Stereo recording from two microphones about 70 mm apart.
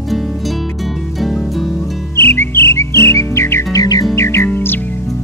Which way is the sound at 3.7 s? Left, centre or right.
Left.